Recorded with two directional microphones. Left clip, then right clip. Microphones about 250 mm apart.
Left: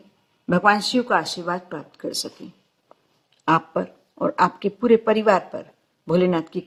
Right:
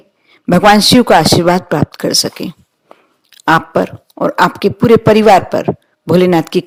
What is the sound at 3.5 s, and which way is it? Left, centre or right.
A man's voice, right.